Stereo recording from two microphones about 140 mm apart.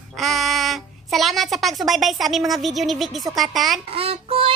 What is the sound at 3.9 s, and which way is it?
Child singing, 45° right (ahead or behind).